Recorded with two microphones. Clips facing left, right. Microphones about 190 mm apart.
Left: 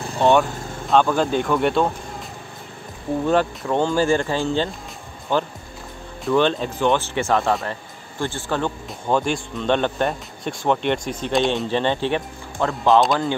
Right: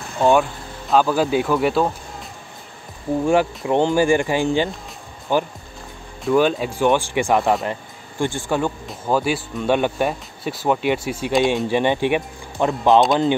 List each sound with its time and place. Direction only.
0.2 s speech: 5° right (ahead or behind)
3.3 s speech: 15° right (ahead or behind)
11.6 s speech: 15° right (ahead or behind)